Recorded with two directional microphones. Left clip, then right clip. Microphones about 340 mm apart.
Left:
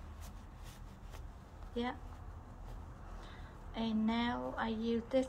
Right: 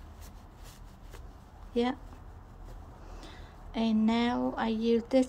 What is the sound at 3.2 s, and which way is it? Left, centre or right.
Speech, right.